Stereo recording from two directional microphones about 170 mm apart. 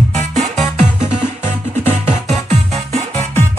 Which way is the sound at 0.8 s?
45° right (ahead or behind).